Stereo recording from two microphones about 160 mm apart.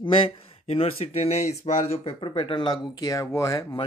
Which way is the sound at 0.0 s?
35° left (ahead or behind).